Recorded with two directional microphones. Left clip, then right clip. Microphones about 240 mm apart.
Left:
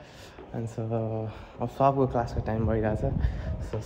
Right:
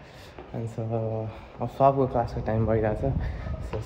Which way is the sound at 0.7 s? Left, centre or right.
Centre.